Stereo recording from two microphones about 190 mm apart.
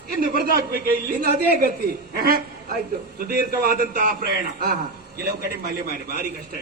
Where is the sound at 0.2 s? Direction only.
55° right (ahead or behind).